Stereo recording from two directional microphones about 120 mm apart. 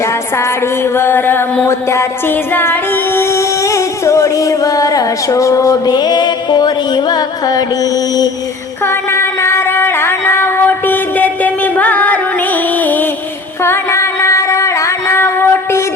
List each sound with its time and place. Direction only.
0.9 s music: 20° left (ahead or behind); by 7.6 s 35° left (ahead or behind)
8.9 s a sound: 20° left (ahead or behind)
12.8 s music: 15° left (ahead or behind)